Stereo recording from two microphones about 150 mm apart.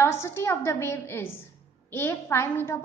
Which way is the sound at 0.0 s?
15° left (ahead or behind).